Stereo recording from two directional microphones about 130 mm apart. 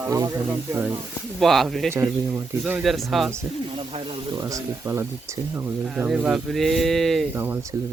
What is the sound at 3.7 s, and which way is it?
Speech, 45° right (ahead or behind).